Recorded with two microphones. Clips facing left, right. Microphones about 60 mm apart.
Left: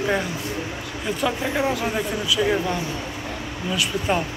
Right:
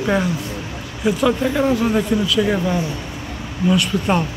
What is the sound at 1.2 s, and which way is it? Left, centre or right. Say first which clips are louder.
Speech: right 5 dB; centre.